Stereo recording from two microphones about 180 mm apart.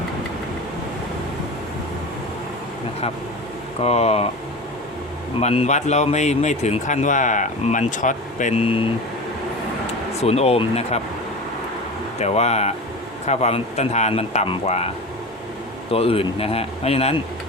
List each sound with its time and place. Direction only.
3.8 s a man's voice: 35° left (ahead or behind)
5.4 s a man's voice: 35° left (ahead or behind)
10.2 s a man's voice: 35° left (ahead or behind)
12.2 s a man's voice: 35° left (ahead or behind)
15.9 s a man's voice: 30° left (ahead or behind)